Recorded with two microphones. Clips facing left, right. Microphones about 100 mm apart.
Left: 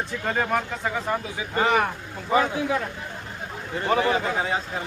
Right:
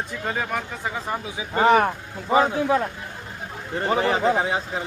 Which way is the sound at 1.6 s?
40° right (ahead or behind).